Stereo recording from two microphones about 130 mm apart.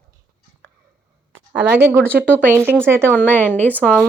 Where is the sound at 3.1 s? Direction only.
10° left (ahead or behind).